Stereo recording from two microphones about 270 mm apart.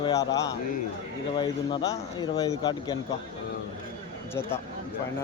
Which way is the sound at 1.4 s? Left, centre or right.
Centre.